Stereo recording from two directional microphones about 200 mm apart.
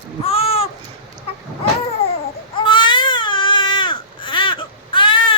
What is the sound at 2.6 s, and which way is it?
Baby cry, 25° left (ahead or behind).